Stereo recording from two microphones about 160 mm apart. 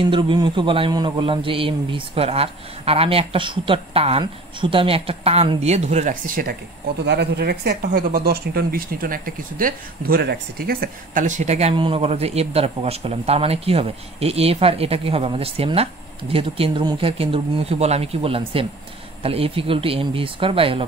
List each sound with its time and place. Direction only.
0.0 s speech: 30° right (ahead or behind); by 6.5 s 60° right (ahead or behind)
7.1 s speech: 85° right; by 20.8 s 35° right (ahead or behind)